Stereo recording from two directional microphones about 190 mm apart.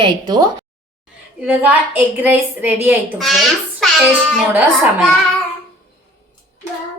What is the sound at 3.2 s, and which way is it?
Speech, centre (ahead or behind).